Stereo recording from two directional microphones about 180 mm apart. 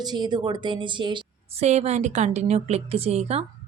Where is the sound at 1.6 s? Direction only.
40° right (ahead or behind).